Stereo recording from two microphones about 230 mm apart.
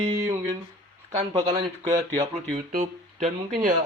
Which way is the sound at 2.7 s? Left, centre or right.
Right.